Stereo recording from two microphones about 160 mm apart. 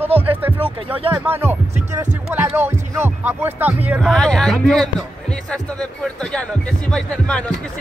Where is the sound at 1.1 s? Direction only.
15° right (ahead or behind).